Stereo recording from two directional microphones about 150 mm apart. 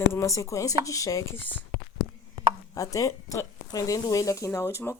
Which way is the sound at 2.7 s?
25° left (ahead or behind).